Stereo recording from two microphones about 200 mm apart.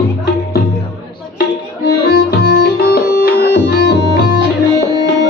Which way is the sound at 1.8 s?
55° left (ahead or behind).